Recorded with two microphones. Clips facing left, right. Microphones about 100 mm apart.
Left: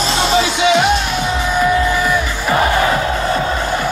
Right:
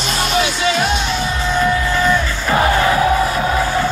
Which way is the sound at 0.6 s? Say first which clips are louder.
Left 5 dB; 20° left (ahead or behind).